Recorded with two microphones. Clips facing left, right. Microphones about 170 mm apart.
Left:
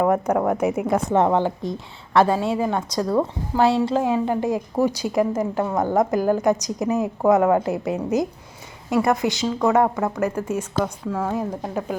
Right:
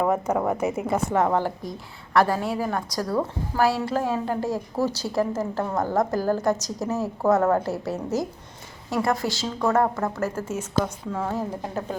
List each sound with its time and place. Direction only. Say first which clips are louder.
0.0 s a woman's voice: left 3 dB; 10° left (ahead or behind)
9.5 s a woman's voice: left 3 dB; 5° left (ahead or behind)